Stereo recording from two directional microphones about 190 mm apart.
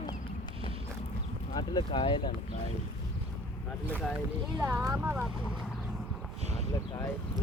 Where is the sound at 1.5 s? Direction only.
25° left (ahead or behind).